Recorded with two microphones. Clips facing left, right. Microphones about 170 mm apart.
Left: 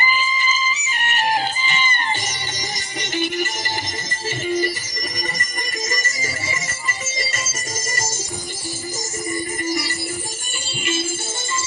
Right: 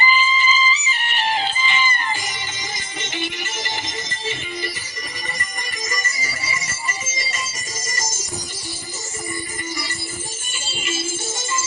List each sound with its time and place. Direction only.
0.0 s music: 50° left (ahead or behind)
3.2 s music: 45° left (ahead or behind)